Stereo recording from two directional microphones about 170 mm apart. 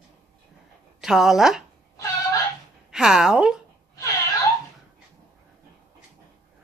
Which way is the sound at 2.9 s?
5° right (ahead or behind).